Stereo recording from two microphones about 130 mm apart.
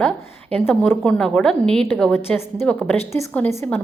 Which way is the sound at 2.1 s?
20° left (ahead or behind).